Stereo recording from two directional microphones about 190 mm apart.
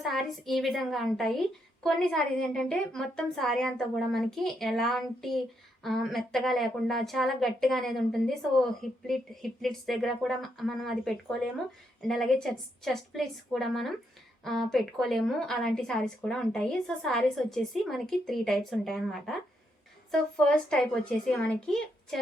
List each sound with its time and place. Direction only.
0.0 s a woman's voice: centre (ahead or behind)